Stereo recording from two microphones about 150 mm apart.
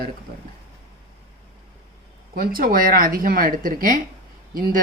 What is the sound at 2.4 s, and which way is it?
Speech, 75° right (ahead or behind).